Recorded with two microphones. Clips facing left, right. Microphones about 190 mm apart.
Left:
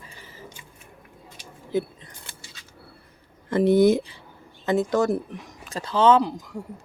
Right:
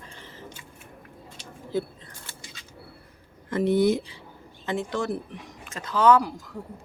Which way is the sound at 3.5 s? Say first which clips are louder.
Left 4 dB; 35° left (ahead or behind).